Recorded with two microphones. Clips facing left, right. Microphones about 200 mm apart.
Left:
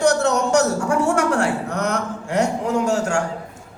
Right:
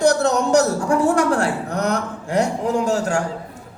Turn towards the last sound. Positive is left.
turn(degrees=-35)  # may be behind; listen again after turning